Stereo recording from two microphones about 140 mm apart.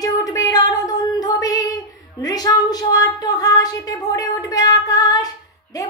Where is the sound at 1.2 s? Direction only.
25° left (ahead or behind).